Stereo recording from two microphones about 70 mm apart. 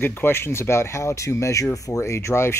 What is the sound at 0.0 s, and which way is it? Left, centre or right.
Speech, left.